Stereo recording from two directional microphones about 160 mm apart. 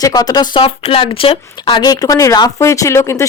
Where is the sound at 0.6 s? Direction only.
35° left (ahead or behind).